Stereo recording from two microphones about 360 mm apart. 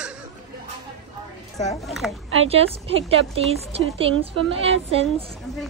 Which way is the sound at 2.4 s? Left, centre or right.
Centre.